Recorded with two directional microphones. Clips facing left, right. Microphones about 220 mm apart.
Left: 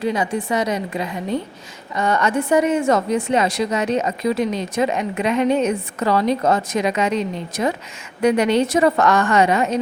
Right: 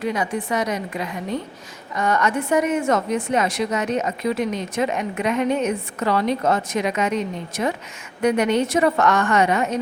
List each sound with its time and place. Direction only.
0.0 s a woman's voice: 30° left (ahead or behind)
8.2 s a woman's voice: 30° left (ahead or behind)
9.4 s music: 90° left